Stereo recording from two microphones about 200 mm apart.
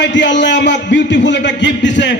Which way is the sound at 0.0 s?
60° left (ahead or behind).